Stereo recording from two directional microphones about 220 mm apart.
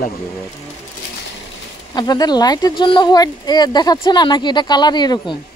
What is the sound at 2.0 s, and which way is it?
Speech, 20° left (ahead or behind).